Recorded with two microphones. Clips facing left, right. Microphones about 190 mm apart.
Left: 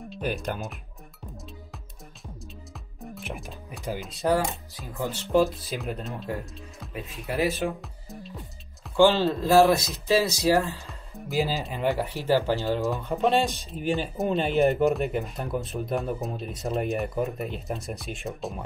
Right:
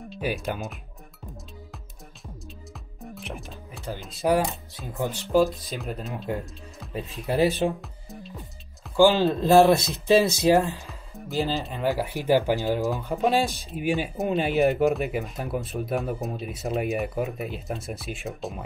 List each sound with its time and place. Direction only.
0.1 s speech: 5° right (ahead or behind)
3.0 s music: centre (ahead or behind)
4.0 s speech: centre (ahead or behind)
4.9 s speech: 15° right (ahead or behind)
5.2 s speech: centre (ahead or behind)
6.9 s a man's voice: 25° right (ahead or behind)
7.8 s music: centre (ahead or behind)
9.0 s a man's voice: 15° right (ahead or behind)
10.9 s speech: centre (ahead or behind)
12.1 s speech: 15° right (ahead or behind)
12.8 s speech: centre (ahead or behind)